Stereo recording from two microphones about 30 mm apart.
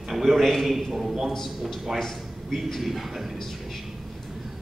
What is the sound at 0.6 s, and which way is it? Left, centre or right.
Speech, centre.